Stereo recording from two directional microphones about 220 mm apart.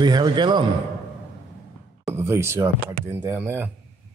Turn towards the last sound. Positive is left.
turn(degrees=-10)  # may be behind; listen again after turning